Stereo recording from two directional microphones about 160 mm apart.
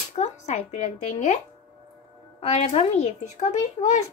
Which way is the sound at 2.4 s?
40° left (ahead or behind).